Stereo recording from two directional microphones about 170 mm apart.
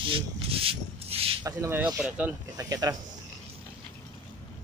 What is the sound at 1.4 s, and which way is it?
Speech, 15° right (ahead or behind).